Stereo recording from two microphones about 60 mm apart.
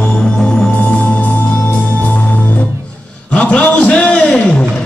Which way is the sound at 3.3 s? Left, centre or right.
Centre.